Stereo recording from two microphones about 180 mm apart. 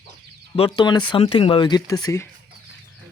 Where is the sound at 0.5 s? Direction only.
30° left (ahead or behind).